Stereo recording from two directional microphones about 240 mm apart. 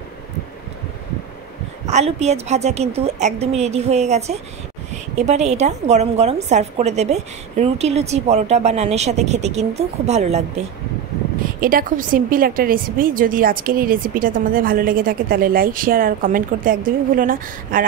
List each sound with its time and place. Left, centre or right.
1.9 s a woman's voice: right
11.6 s a woman's voice: right